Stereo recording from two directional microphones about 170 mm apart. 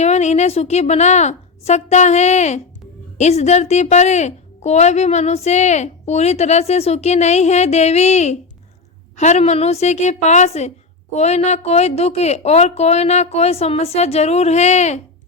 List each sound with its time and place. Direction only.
0.0 s a woman's voice: 40° left (ahead or behind)